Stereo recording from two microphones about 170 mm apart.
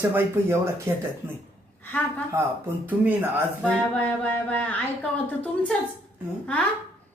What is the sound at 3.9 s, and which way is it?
A woman's voice, 10° left (ahead or behind).